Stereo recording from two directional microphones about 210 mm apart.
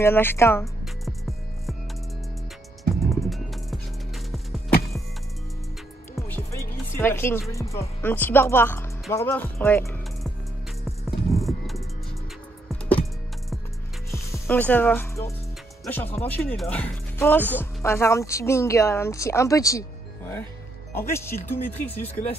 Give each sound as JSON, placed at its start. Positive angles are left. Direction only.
{"t": 0.0, "sound": "speech", "side_deg": 10}
{"t": 2.8, "sound": "music", "side_deg": 0}
{"t": 6.2, "sound": "music", "side_deg": 10}
{"t": 6.9, "sound": "speech", "side_deg": 10}
{"t": 11.1, "sound": "music", "side_deg": 0}
{"t": 14.1, "sound": "speech", "side_deg": 10}